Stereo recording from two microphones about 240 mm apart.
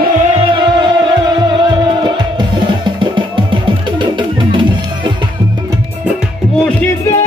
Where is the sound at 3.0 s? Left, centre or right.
Centre.